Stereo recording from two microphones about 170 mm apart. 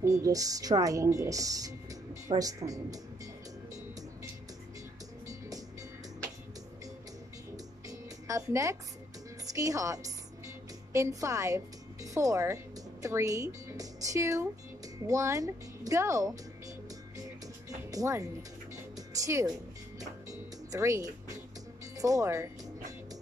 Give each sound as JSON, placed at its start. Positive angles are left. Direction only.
{"t": 0.0, "sound": "speech", "side_deg": -20}
{"t": 5.3, "sound": "music", "side_deg": -20}
{"t": 8.3, "sound": "a woman's voice", "side_deg": -20}
{"t": 17.6, "sound": "music", "side_deg": -20}